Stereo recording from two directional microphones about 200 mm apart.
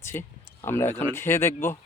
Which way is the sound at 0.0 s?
10° left (ahead or behind).